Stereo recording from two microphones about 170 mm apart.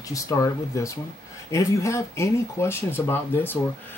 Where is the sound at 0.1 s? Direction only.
20° left (ahead or behind).